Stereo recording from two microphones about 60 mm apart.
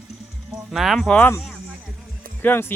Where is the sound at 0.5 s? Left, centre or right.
Centre.